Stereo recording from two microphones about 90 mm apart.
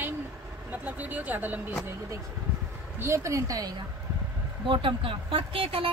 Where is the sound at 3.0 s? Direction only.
35° right (ahead or behind).